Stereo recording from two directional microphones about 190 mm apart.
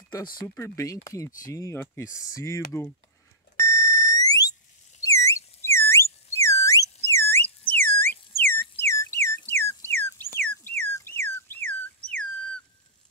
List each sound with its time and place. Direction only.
0.6 s speech: 15° left (ahead or behind)
3.5 s alarm: 15° left (ahead or behind)
5.0 s a sound: 15° left (ahead or behind)